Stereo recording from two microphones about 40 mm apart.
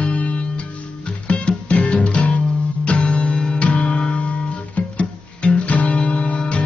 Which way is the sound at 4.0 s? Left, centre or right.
Left.